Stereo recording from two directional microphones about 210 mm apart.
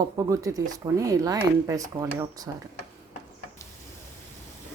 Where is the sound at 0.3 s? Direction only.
15° right (ahead or behind).